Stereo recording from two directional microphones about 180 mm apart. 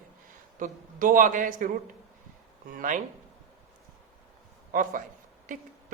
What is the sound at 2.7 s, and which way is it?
Speech, 45° right (ahead or behind).